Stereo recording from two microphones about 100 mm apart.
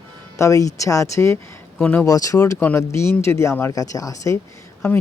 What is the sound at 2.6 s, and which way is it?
Speech, 20° left (ahead or behind).